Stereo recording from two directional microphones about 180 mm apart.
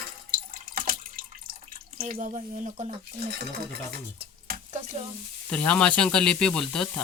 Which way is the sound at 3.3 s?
65° right (ahead or behind).